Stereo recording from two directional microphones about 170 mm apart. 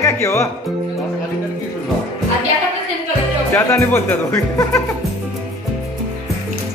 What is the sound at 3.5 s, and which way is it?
Speech, 15° left (ahead or behind).